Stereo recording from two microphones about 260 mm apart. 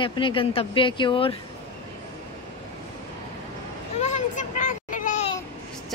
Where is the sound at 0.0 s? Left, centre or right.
Centre.